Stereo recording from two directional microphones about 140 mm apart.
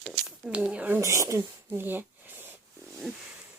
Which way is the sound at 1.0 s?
20° right (ahead or behind).